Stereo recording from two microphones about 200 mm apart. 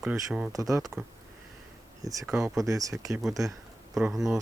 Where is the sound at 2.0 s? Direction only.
15° right (ahead or behind).